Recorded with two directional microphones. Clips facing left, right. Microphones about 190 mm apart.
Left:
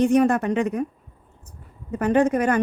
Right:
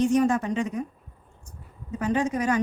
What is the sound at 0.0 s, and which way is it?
Speech, 60° left (ahead or behind).